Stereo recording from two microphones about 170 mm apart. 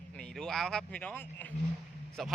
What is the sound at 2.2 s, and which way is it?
Speech, centre (ahead or behind).